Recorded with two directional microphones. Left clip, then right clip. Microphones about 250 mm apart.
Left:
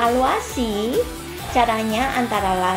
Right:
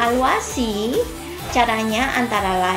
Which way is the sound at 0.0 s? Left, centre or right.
Left.